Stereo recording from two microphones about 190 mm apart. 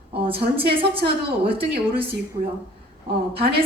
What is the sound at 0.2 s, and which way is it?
A woman's voice, 30° right (ahead or behind).